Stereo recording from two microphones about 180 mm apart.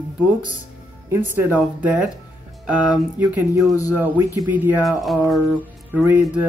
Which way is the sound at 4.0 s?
10° right (ahead or behind).